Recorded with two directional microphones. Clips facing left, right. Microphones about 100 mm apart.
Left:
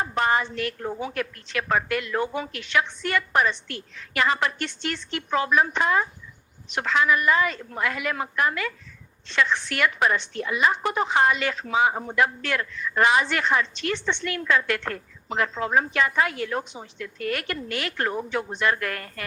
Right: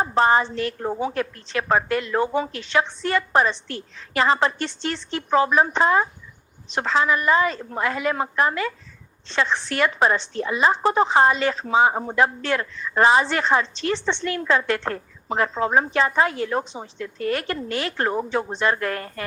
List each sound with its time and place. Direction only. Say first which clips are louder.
0.0 s speech: right 5 dB; 30° right (ahead or behind)